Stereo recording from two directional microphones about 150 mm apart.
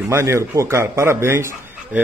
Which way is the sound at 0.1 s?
20° right (ahead or behind).